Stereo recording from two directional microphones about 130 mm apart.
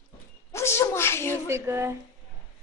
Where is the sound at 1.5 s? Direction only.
20° right (ahead or behind).